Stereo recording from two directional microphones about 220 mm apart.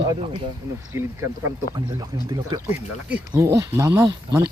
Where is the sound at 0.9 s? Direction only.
10° right (ahead or behind).